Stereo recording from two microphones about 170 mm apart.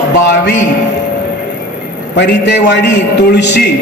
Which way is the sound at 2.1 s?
85° left.